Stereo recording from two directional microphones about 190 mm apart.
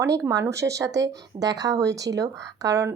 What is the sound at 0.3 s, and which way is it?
A woman's voice, 15° right (ahead or behind).